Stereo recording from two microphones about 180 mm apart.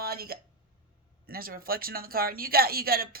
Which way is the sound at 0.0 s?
60° right (ahead or behind).